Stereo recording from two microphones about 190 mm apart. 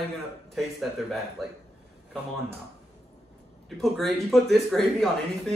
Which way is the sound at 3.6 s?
Centre (ahead or behind).